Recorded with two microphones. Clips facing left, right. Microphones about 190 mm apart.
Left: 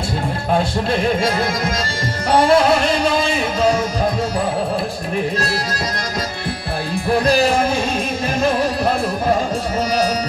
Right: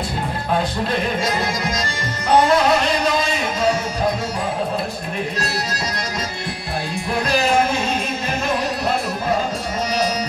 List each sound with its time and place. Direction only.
2.3 s music: 30° left (ahead or behind)